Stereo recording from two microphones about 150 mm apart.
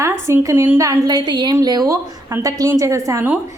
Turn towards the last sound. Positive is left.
turn(degrees=-20)  # may be behind; listen again after turning